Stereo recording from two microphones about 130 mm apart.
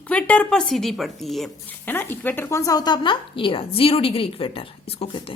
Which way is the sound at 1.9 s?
15° left (ahead or behind).